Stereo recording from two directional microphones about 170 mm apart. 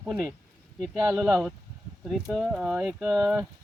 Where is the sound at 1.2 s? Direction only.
Centre (ahead or behind).